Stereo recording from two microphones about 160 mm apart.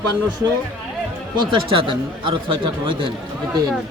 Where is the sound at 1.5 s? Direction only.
30° right (ahead or behind).